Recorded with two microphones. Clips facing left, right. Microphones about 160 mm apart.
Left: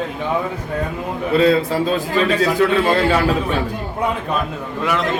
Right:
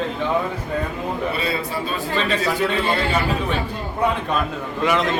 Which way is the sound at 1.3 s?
90° left.